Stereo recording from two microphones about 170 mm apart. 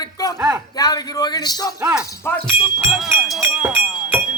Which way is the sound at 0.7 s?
20° left (ahead or behind).